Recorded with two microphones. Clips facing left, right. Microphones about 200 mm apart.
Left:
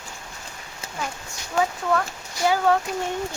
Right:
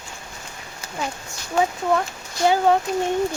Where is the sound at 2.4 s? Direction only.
20° right (ahead or behind).